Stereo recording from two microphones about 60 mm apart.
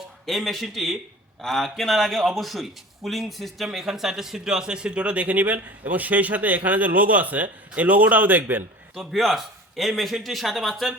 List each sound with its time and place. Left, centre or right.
0.3 s a man's voice: centre; by 8.6 s right
9.0 s a man's voice: centre